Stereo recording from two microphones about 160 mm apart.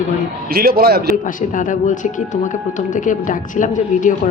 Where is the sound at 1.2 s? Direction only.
55° left (ahead or behind).